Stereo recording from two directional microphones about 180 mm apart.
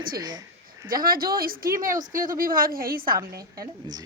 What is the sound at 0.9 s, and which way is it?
Speech, 50° right (ahead or behind).